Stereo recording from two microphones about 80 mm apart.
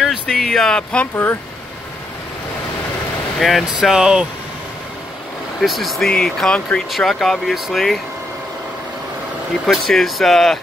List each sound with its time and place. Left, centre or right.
0.0 s speech: centre
1.1 s speech: left
3.3 s speech: centre
3.9 s speech: centre
5.6 s speech: centre
9.7 s speech: centre